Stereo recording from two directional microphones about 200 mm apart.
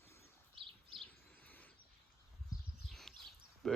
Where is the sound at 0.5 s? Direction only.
25° right (ahead or behind).